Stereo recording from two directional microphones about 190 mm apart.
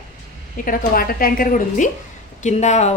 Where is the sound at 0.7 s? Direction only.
50° left (ahead or behind).